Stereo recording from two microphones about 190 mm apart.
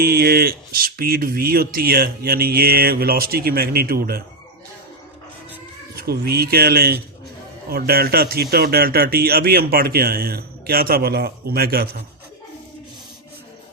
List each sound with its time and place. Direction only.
0.0 s a man's voice: 55° right (ahead or behind)
6.0 s a man's voice: 55° right (ahead or behind)